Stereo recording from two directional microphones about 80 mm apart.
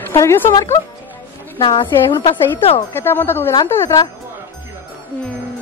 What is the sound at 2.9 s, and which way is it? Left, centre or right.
A woman's voice, left.